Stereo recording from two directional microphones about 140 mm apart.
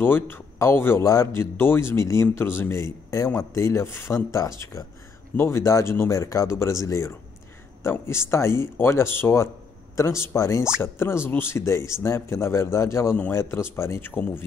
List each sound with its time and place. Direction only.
0.0 s a man's voice: 15° left (ahead or behind)